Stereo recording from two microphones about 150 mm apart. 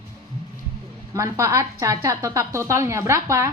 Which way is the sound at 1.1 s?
20° right (ahead or behind).